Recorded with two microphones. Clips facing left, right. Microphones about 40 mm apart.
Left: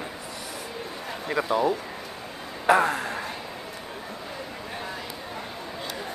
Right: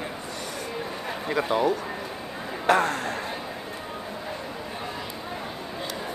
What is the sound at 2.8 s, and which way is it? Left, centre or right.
Speech, centre.